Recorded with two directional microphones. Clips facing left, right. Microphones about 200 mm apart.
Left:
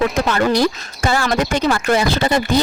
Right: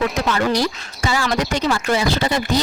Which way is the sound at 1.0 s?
55° left (ahead or behind).